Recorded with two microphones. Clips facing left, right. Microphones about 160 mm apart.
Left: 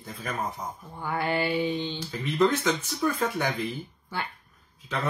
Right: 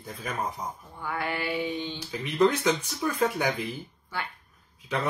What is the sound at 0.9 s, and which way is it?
Mantra, 30° left (ahead or behind).